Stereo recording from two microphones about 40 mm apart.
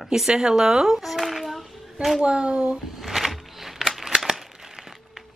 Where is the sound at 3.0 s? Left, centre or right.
Centre.